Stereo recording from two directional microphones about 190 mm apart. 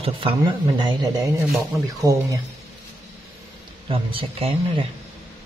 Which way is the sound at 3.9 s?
30° right (ahead or behind).